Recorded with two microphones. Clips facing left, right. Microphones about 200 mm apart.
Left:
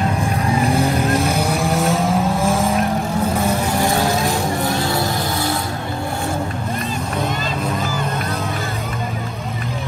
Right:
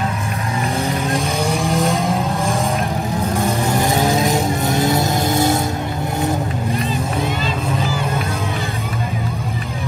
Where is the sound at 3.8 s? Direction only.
20° right (ahead or behind).